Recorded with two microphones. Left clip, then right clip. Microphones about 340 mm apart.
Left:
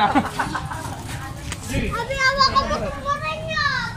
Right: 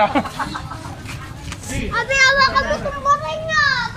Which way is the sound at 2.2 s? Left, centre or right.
Right.